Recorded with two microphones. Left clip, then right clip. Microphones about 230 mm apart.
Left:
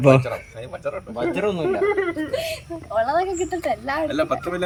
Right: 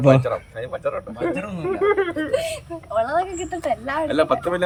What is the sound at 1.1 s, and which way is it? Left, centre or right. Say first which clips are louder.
Speech: left 3 dB; left.